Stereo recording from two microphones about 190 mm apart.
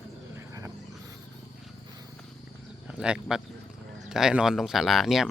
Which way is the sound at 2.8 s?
5° right (ahead or behind).